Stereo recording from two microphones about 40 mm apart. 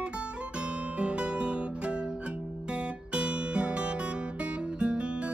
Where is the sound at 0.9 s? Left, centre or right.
Right.